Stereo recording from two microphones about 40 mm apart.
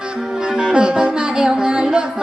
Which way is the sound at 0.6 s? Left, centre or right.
Right.